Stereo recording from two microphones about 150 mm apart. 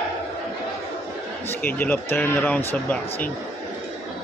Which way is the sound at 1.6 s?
10° left (ahead or behind).